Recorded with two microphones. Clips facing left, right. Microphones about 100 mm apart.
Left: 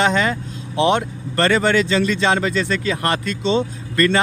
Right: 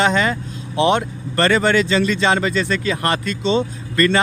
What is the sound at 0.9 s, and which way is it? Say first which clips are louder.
Speech: right 1 dB; 50° right (ahead or behind).